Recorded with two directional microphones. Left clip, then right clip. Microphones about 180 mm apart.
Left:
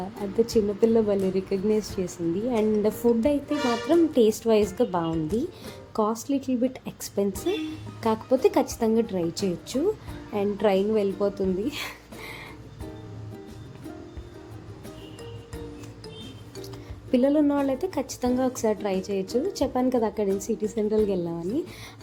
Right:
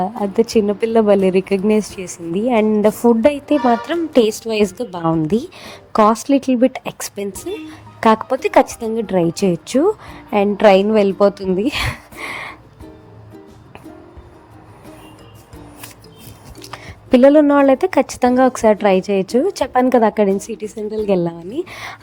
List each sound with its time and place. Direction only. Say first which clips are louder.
0.0 s a woman's voice: right 9 dB; 40° right (ahead or behind)
16.7 s a woman's voice: right 11 dB; 40° right (ahead or behind)